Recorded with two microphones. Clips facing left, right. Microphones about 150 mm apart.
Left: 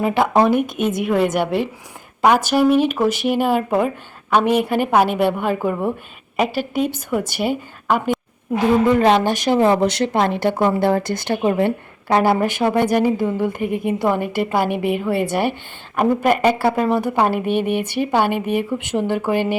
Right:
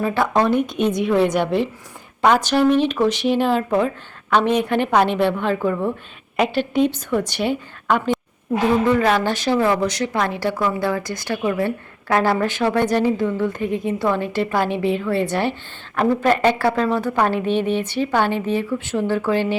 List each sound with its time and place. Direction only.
0.0 s a woman's voice: 15° left (ahead or behind)
0.5 s a woman's voice: 5° left (ahead or behind)
8.9 s a woman's voice: 25° left (ahead or behind)